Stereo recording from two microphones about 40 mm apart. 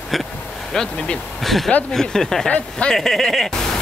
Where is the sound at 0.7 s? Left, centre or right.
Centre.